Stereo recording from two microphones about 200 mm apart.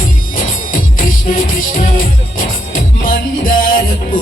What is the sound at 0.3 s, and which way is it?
Music, 45° left (ahead or behind).